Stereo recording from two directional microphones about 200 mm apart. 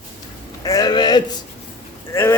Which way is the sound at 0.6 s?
20° left (ahead or behind).